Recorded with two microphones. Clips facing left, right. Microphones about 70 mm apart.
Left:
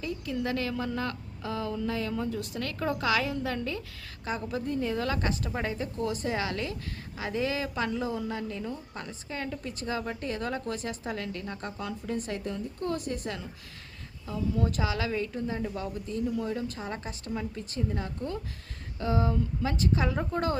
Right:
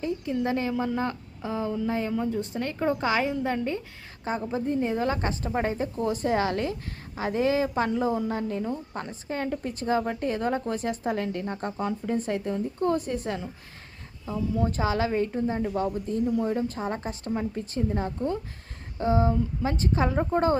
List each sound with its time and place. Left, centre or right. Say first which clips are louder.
0.0 s a woman's voice: right 5 dB; right
13.0 s a woman's voice: right 4 dB; left
13.2 s a woman's voice: right 5 dB; right
14.8 s a woman's voice: right 5 dB; right